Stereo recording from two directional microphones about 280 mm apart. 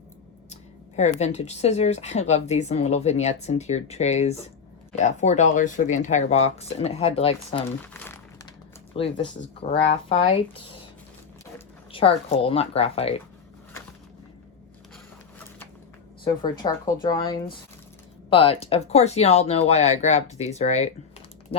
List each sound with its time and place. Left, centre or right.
0.5 s speech: left
7.9 s crumpling: centre
9.0 s speech: centre
11.9 s speech: centre
16.2 s speech: centre